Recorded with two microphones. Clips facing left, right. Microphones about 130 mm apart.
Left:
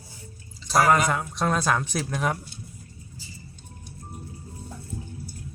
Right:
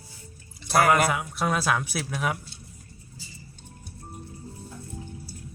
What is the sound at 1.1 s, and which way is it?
Speech, 5° right (ahead or behind).